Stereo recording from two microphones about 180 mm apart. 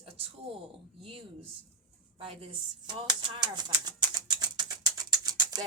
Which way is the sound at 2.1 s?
30° right (ahead or behind).